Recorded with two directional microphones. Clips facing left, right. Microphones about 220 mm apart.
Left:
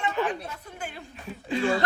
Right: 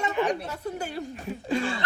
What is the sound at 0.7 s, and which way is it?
Speech, 40° right (ahead or behind).